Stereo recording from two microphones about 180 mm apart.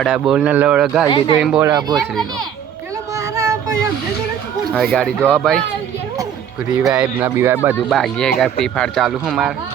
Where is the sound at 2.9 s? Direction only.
15° right (ahead or behind).